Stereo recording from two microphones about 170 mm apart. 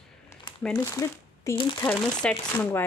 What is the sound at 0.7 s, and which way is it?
Speech, 20° left (ahead or behind).